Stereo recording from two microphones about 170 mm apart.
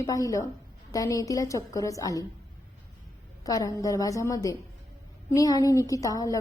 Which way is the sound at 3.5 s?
20° left (ahead or behind).